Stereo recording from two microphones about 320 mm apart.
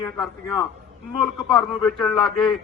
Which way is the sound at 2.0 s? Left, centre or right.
Centre.